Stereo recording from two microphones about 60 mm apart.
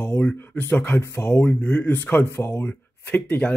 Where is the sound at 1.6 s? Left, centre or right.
Left.